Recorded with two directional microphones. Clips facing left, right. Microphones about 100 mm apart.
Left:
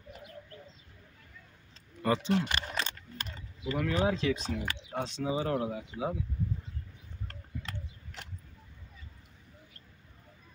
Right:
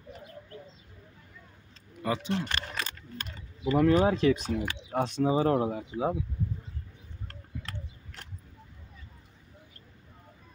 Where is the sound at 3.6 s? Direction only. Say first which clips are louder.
Right 7 dB; 40° right (ahead or behind).